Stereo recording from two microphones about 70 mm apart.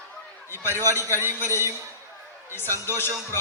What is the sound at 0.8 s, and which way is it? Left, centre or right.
Speech, left.